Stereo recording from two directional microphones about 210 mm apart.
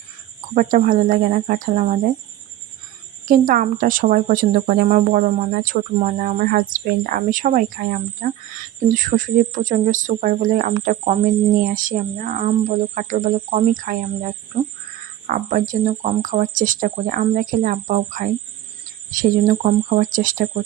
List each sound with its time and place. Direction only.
0.5 s speech: 40° right (ahead or behind)
3.2 s speech: 40° right (ahead or behind)